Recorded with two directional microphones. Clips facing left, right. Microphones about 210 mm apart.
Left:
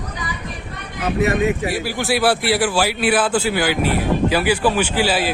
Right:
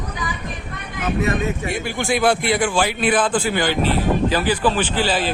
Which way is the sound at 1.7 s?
5° left (ahead or behind).